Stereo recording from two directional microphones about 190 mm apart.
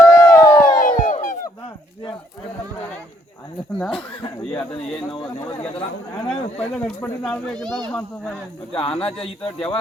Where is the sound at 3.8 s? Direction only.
5° left (ahead or behind).